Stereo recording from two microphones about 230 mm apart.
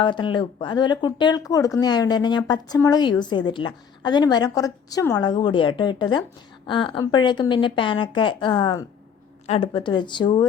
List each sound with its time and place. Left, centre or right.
0.0 s speech: left